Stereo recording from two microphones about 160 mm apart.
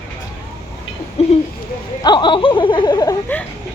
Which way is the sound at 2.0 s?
30° left (ahead or behind).